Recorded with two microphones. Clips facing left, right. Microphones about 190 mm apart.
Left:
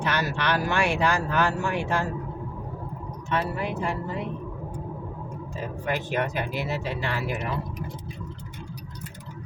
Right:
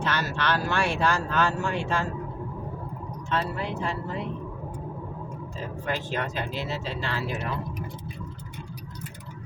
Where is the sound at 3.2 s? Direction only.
15° left (ahead or behind).